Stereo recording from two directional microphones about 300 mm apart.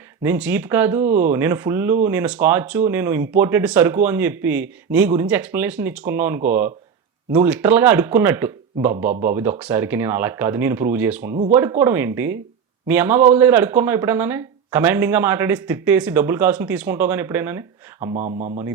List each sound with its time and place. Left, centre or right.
0.2 s speech: centre
18.1 s speech: right